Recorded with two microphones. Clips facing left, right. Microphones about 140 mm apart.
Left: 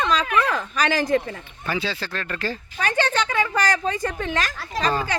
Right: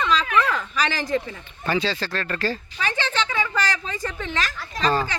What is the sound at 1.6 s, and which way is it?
Speech, 10° left (ahead or behind).